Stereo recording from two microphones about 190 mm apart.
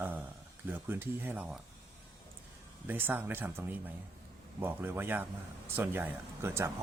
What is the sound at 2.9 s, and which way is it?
Speech, 10° right (ahead or behind).